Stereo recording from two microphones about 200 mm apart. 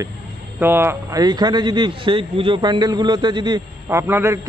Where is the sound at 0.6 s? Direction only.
10° right (ahead or behind).